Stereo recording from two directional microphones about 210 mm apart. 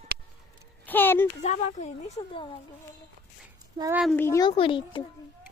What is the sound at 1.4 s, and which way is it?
Speech, 30° left (ahead or behind).